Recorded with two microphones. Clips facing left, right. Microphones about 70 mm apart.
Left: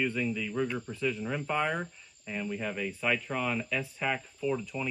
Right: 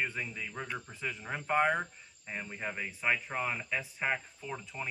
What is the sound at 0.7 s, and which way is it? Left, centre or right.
Speech, centre.